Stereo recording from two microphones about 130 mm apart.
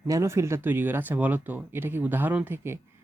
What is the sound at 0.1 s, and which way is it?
Speech, 20° right (ahead or behind).